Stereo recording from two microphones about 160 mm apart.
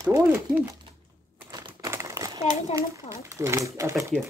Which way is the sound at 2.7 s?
20° right (ahead or behind).